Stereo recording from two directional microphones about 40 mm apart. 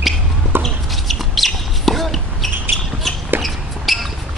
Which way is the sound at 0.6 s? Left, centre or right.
Centre.